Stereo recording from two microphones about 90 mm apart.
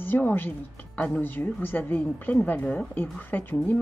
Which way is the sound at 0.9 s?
10° left (ahead or behind).